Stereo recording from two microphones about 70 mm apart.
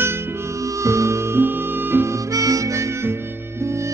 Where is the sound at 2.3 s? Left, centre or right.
Right.